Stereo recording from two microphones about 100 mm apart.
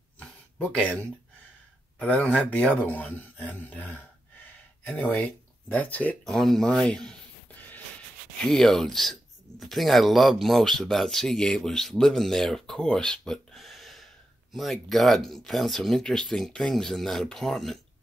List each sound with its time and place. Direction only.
0.2 s a sound: 15° left (ahead or behind)
2.0 s speech: 15° left (ahead or behind)
6.2 s speech: centre (ahead or behind)
8.5 s speech: 5° left (ahead or behind)